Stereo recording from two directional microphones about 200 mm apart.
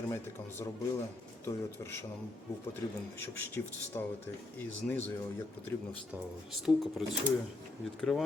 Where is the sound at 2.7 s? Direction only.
10° left (ahead or behind).